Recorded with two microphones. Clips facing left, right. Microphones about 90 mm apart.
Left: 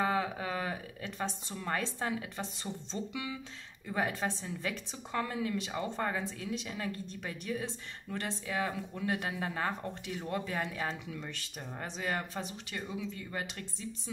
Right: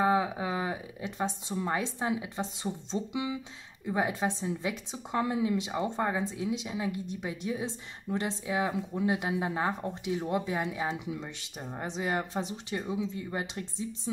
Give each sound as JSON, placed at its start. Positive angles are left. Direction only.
{"t": 0.0, "sound": "a woman's voice", "side_deg": -15}